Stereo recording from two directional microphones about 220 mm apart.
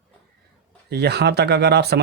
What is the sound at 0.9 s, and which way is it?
Speech, 50° right (ahead or behind).